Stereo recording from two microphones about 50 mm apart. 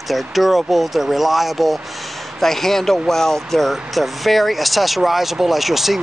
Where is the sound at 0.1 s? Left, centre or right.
Centre.